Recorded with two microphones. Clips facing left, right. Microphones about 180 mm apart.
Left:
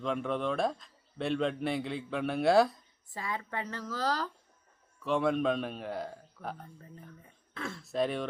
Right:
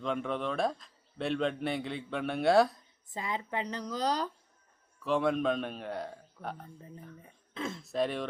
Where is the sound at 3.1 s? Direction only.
20° right (ahead or behind).